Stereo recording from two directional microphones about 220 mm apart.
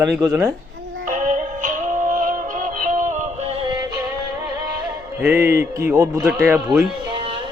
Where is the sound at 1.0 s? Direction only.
35° right (ahead or behind).